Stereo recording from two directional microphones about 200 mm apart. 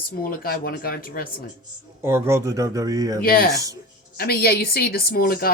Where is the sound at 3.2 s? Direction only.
45° left (ahead or behind).